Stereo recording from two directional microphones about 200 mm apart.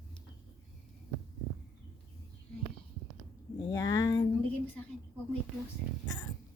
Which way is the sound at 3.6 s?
15° left (ahead or behind).